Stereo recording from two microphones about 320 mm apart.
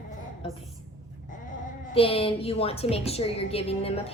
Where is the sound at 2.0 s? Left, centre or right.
Centre.